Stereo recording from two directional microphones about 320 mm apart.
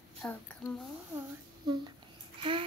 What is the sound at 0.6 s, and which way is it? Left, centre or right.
Speech, centre.